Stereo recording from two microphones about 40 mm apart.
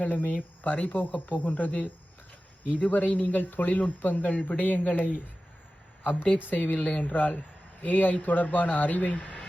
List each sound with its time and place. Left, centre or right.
0.1 s speech: left
6.0 s speech: left
6.7 s speech: left
7.1 s a man's voice: left
9.1 s a sound: centre